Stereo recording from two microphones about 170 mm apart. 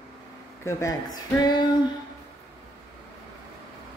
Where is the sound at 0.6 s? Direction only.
20° left (ahead or behind).